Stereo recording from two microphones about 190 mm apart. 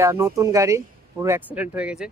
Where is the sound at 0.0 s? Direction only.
15° right (ahead or behind).